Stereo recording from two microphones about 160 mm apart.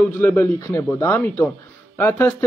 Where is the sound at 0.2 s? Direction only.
15° left (ahead or behind).